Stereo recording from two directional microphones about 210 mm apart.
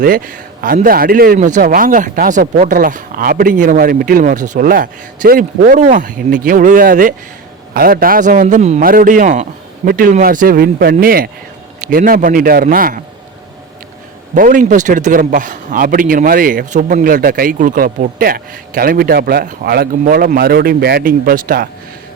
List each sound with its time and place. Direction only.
0.0 s a man's voice: 40° right (ahead or behind)
14.3 s a man's voice: 40° right (ahead or behind)